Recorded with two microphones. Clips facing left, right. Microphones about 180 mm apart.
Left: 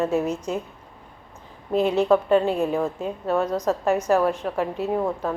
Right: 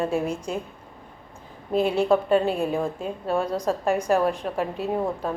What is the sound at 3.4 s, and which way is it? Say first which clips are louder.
A woman's voice: left 2 dB; 10° right (ahead or behind).